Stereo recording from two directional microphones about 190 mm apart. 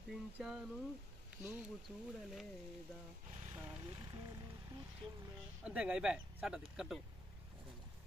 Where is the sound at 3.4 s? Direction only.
25° right (ahead or behind).